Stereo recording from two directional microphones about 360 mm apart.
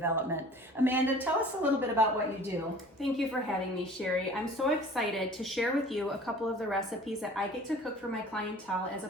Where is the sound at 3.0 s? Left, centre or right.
Centre.